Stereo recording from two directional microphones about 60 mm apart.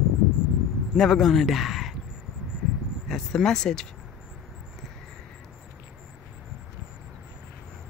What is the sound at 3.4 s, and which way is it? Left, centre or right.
Speech, centre.